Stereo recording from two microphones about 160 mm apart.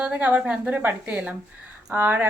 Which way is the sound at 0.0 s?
10° right (ahead or behind).